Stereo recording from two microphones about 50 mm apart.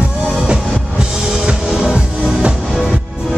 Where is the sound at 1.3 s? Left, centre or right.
Centre.